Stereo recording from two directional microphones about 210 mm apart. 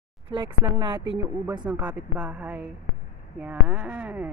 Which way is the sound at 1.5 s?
10° right (ahead or behind).